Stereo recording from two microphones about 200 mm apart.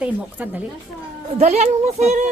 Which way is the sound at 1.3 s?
35° right (ahead or behind).